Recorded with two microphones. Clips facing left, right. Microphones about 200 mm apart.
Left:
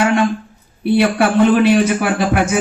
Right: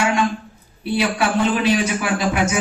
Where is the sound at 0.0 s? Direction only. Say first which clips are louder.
Left 5 dB; 55° left (ahead or behind).